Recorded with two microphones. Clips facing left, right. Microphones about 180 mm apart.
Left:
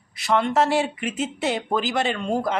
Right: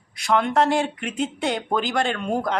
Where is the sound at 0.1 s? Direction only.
Centre (ahead or behind).